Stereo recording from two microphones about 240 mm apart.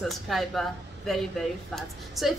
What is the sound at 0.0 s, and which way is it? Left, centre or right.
A woman's voice, centre.